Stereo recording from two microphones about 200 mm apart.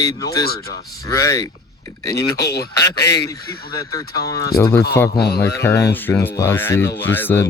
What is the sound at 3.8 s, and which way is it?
Speech, 15° left (ahead or behind).